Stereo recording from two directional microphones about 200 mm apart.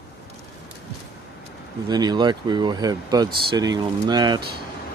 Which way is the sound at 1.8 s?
20° right (ahead or behind).